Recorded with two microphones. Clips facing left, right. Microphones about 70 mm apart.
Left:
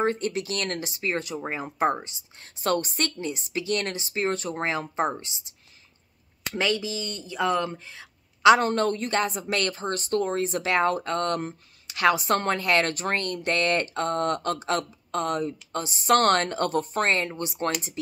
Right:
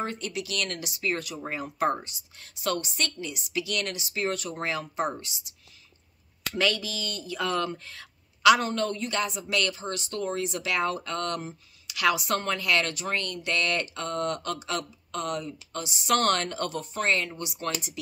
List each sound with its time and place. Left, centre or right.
0.0 s speech: left
6.5 s speech: left
8.5 s speech: left